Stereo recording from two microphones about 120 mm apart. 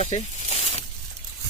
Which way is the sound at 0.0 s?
65° left (ahead or behind).